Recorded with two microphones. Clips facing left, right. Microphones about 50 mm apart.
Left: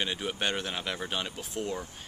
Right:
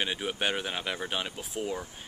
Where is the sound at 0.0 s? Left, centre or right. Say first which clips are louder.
Right 1 dB; centre.